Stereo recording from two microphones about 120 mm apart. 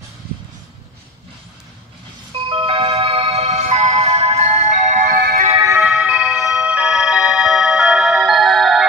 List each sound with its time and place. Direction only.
2.3 s music: 50° right (ahead or behind)
5.8 s music: 5° right (ahead or behind)